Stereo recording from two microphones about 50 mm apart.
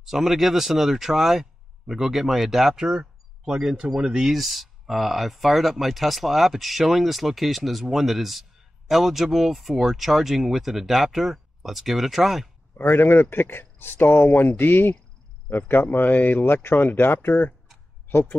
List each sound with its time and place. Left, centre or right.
0.0 s speech: centre
12.7 s speech: left